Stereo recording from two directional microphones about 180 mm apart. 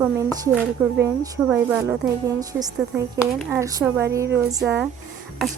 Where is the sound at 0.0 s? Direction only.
15° right (ahead or behind).